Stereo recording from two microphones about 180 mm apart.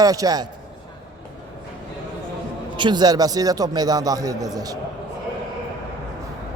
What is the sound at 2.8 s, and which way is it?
Speech, 25° right (ahead or behind).